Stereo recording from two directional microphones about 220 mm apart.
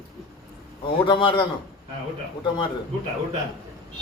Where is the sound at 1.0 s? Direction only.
20° left (ahead or behind).